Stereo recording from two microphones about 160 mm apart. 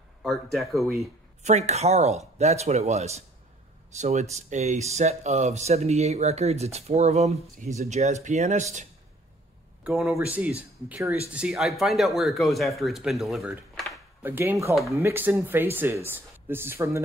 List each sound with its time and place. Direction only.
0.2 s speech: centre (ahead or behind)
1.4 s speech: 45° right (ahead or behind)
9.8 s speech: 5° right (ahead or behind)
14.2 s speech: 15° right (ahead or behind)